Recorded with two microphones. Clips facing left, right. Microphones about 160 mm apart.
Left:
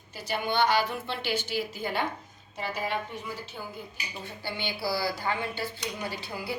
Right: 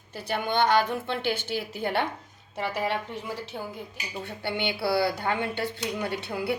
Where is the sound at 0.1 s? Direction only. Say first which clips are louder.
Right 2 dB; 55° right (ahead or behind); by 3.3 s 75° right (ahead or behind).